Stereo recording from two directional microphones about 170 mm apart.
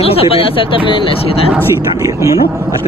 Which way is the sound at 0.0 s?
35° left (ahead or behind).